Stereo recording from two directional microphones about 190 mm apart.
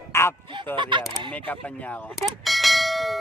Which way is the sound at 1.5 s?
5° left (ahead or behind).